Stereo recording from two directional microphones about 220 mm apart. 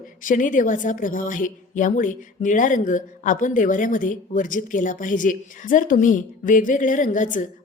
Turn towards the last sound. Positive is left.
turn(degrees=35)  # may be behind; listen again after turning